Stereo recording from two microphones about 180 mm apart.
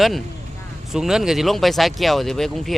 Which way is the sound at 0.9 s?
5° right (ahead or behind).